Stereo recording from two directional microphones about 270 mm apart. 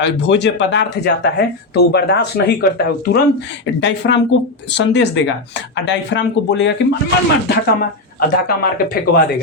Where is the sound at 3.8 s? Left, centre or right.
Left.